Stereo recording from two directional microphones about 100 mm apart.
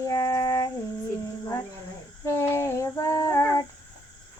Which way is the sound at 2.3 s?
25° left (ahead or behind).